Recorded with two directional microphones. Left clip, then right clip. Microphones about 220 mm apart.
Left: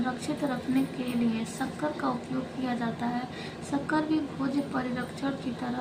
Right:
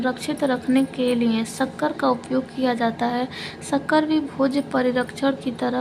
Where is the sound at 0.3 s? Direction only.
55° right (ahead or behind).